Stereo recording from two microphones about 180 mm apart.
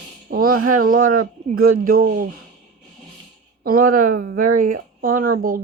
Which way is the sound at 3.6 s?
55° right (ahead or behind).